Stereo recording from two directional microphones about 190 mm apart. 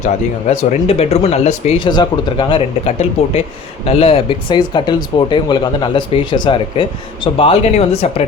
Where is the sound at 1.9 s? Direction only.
25° left (ahead or behind).